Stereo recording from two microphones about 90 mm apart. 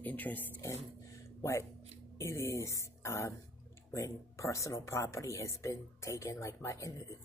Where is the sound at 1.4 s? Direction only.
30° left (ahead or behind).